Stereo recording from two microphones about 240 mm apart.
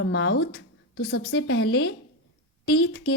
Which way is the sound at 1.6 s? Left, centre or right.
Left.